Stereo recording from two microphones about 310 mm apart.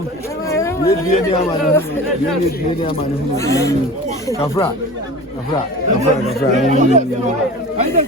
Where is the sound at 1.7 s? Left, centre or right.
Centre.